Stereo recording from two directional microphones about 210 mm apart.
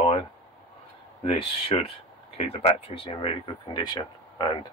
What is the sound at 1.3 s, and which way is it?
Speech, 30° left (ahead or behind).